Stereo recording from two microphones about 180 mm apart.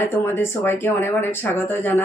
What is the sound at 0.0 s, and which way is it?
Speech, 15° left (ahead or behind).